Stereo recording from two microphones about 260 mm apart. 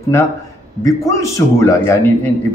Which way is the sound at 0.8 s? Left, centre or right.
Centre.